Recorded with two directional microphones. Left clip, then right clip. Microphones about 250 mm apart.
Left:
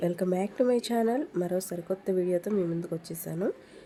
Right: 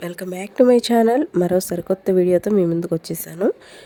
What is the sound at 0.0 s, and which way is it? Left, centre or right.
Speech, right.